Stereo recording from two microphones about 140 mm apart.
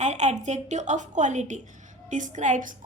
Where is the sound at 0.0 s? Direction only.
55° right (ahead or behind).